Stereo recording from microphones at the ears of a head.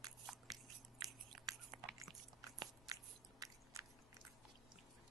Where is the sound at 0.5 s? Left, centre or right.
Right.